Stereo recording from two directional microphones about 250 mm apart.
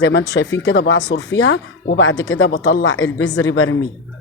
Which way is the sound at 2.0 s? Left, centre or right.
Left.